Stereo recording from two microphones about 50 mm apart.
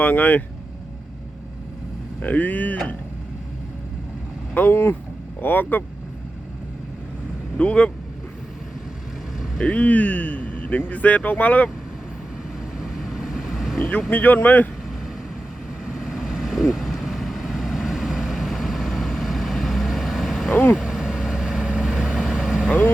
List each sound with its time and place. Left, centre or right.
0.0 s speech: left
2.2 s speech: left
4.7 s speech: left
5.4 s speech: left
7.6 s speech: left
9.6 s speech: left
12.8 s vehicle: centre
13.7 s speech: left
15.9 s vehicle: centre
20.5 s speech: left
20.8 s vehicle: centre